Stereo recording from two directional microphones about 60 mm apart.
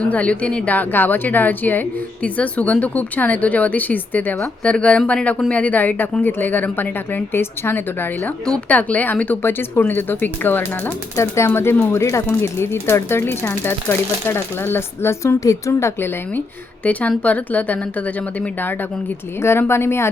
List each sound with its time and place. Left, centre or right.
0.0 s speech: left
8.7 s speech: left
9.4 s speech: left
11.2 s speech: left
15.4 s a woman's voice: left
16.0 s speech: left
16.8 s speech: left
19.4 s speech: left